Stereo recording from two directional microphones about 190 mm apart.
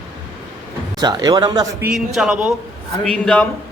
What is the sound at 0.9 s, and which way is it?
Speech, 20° right (ahead or behind).